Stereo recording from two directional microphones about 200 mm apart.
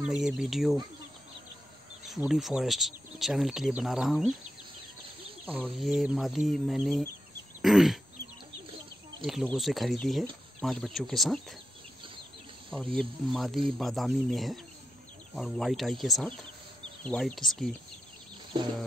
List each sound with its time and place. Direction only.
0.0 s speech: 5° right (ahead or behind)
2.2 s speech: centre (ahead or behind)
5.4 s speech: 5° right (ahead or behind)
9.2 s speech: centre (ahead or behind)
12.7 s speech: 5° left (ahead or behind)